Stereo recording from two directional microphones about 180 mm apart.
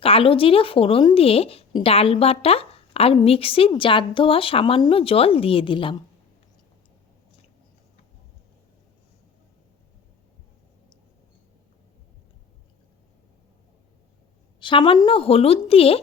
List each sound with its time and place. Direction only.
0.0 s speech: 30° left (ahead or behind)
14.6 s speech: 30° left (ahead or behind)